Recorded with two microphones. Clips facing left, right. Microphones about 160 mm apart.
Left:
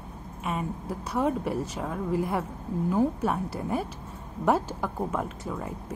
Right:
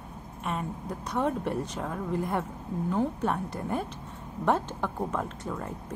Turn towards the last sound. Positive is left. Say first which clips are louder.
# left 1 dB
turn(degrees=5)  # may be behind; listen again after turning